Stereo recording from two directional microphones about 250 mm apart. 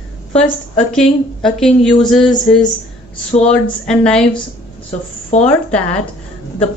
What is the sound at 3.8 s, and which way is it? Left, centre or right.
Speech, centre.